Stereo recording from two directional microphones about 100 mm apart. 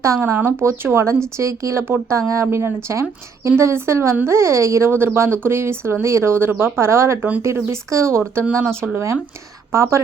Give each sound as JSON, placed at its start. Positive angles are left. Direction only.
{"t": 0.0, "sound": "a woman's voice", "side_deg": -30}
{"t": 8.8, "sound": "speech", "side_deg": 0}
{"t": 9.7, "sound": "a woman's voice", "side_deg": -25}